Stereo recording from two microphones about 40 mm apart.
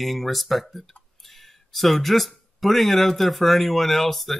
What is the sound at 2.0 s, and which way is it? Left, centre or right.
Speech, centre.